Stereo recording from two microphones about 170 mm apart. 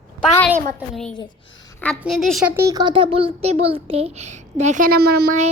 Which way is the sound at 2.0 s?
Centre (ahead or behind).